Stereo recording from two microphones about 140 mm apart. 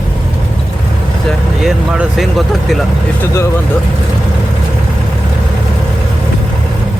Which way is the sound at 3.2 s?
20° left (ahead or behind).